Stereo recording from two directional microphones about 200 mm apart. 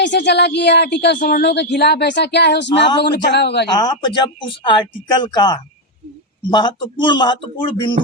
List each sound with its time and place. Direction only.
0.0 s a woman's voice: 60° left (ahead or behind)
3.7 s speech: 20° left (ahead or behind)